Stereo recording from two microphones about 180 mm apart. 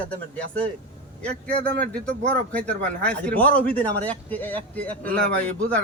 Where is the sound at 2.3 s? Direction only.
5° left (ahead or behind).